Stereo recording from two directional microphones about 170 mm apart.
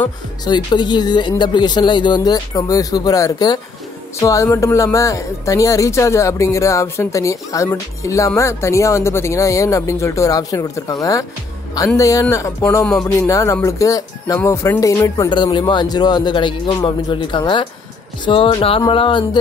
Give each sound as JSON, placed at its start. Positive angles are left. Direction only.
{"t": 0.5, "sound": "speech", "side_deg": 25}